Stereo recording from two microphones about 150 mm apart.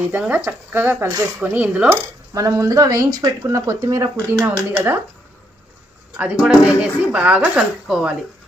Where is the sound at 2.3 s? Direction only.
25° right (ahead or behind).